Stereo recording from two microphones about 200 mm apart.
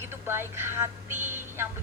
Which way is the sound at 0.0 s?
10° right (ahead or behind).